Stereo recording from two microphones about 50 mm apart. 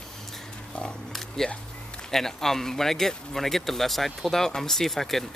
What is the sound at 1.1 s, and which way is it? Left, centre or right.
Speech, centre.